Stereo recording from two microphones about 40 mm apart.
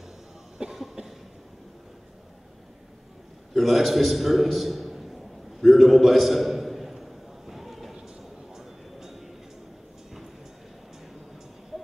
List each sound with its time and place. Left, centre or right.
0.6 s cough: right
3.5 s a man's voice: centre
5.6 s a sound: centre